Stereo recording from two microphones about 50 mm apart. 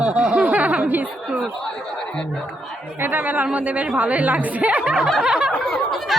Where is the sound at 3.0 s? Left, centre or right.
Right.